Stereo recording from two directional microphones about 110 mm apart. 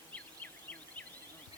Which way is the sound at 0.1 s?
15° left (ahead or behind).